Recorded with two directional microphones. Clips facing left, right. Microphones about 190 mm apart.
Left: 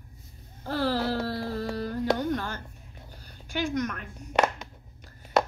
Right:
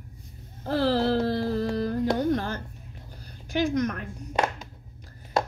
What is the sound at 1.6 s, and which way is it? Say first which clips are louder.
Carnatic music: right 4 dB; 40° right (ahead or behind).